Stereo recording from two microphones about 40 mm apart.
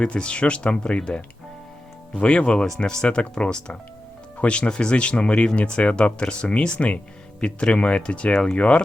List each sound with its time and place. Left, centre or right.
0.0 s speech: left